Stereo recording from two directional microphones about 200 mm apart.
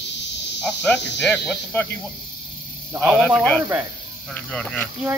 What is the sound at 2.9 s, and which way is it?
Speech, 5° left (ahead or behind).